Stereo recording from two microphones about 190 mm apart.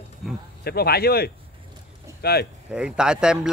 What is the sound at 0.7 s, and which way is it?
A man's voice, 55° left (ahead or behind).